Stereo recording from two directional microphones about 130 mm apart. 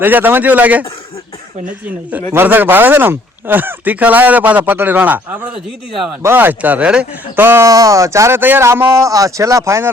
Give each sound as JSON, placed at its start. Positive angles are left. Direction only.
{"t": 0.0, "sound": "speech", "side_deg": -15}